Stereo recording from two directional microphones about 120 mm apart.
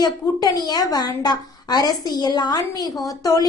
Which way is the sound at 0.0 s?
35° left (ahead or behind).